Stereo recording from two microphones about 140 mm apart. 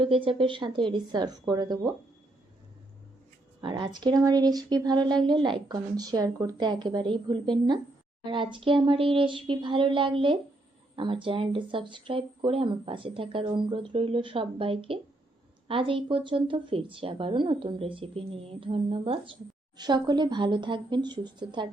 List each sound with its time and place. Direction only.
0.0 s speech: 40° right (ahead or behind)
3.6 s speech: 35° right (ahead or behind)